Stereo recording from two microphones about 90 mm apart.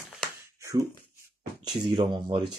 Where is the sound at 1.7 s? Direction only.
55° right (ahead or behind).